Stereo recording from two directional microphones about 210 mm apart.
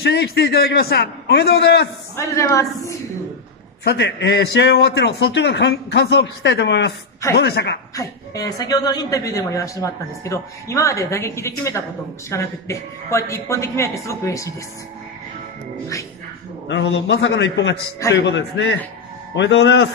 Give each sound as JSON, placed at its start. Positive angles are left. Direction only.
{"t": 0.0, "sound": "a man's voice", "side_deg": 50}
{"t": 2.1, "sound": "a woman's voice", "side_deg": 15}
{"t": 3.8, "sound": "a man's voice", "side_deg": 55}
{"t": 7.9, "sound": "a woman's voice", "side_deg": 15}
{"t": 16.6, "sound": "a man's voice", "side_deg": 60}